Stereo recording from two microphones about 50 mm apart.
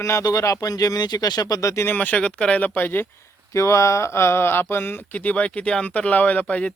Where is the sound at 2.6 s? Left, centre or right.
Left.